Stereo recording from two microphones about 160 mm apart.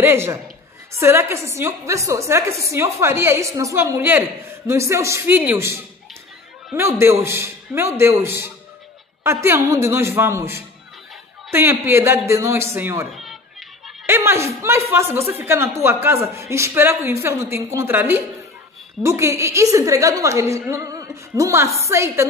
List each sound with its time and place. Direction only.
0.0 s speech: 15° right (ahead or behind)
13.1 s cat: centre (ahead or behind)
14.0 s a woman's voice: 15° right (ahead or behind)